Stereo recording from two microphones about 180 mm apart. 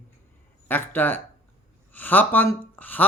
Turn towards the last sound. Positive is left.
turn(degrees=10)  # may be behind; listen again after turning